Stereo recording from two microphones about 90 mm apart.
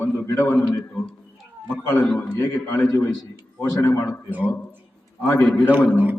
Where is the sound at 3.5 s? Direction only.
30° left (ahead or behind).